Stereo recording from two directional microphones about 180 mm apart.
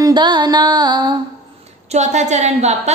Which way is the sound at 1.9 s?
40° right (ahead or behind).